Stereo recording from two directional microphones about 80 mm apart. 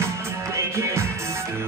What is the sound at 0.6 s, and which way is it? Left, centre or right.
Music, right.